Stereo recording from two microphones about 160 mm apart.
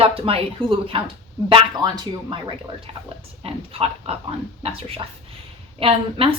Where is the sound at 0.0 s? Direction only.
35° right (ahead or behind).